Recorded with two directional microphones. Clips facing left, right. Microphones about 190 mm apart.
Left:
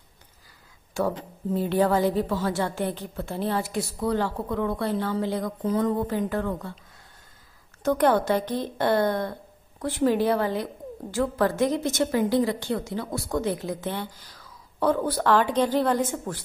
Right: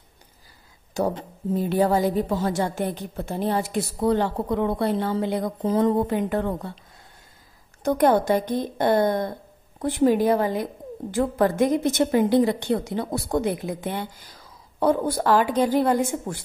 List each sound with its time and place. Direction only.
1.5 s a woman's voice: 10° right (ahead or behind)
5.4 s a woman's voice: 30° right (ahead or behind)
6.0 s a woman's voice: 20° right (ahead or behind)
7.8 s a woman's voice: 15° right (ahead or behind)
11.5 s a woman's voice: 55° right (ahead or behind)
12.0 s a woman's voice: 20° right (ahead or behind)
12.9 s speech: 30° right (ahead or behind)
13.4 s a woman's voice: 15° right (ahead or behind)